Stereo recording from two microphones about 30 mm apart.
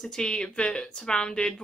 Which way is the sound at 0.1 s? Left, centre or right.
Left.